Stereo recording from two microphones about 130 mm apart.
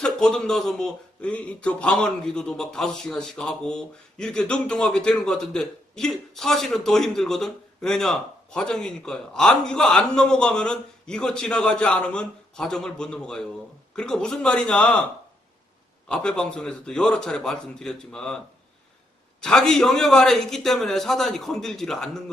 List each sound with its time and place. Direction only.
0.0 s a man's voice: 5° left (ahead or behind)
16.0 s a man's voice: 5° left (ahead or behind)
19.4 s a man's voice: 5° left (ahead or behind)